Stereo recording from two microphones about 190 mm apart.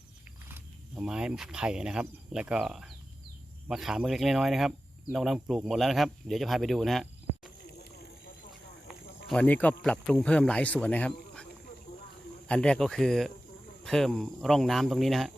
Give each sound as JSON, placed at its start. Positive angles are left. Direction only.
{"t": 0.4, "sound": "speech", "side_deg": -10}
{"t": 8.9, "sound": "a sound", "side_deg": -5}
{"t": 9.3, "sound": "speech", "side_deg": 10}
{"t": 12.5, "sound": "speech", "side_deg": 5}